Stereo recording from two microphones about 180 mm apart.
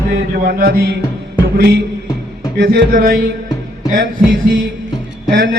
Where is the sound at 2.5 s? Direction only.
55° right (ahead or behind).